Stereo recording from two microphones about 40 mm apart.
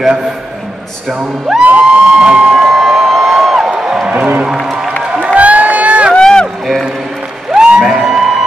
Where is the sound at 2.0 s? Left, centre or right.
Right.